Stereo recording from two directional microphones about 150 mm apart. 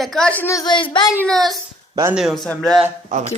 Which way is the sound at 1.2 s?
Centre (ahead or behind).